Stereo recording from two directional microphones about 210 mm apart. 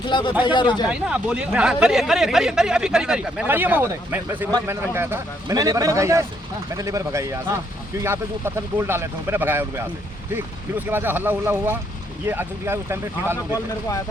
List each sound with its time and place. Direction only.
0.0 s speech: 20° left (ahead or behind)
0.9 s speech: 5° right (ahead or behind)